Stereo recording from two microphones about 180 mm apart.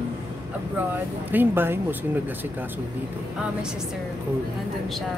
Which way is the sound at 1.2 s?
10° right (ahead or behind).